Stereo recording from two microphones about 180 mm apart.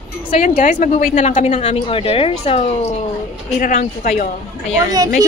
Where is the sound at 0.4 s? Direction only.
50° left (ahead or behind).